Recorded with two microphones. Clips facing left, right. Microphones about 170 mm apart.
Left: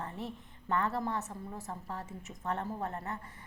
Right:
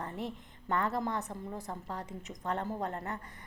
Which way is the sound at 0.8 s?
15° right (ahead or behind).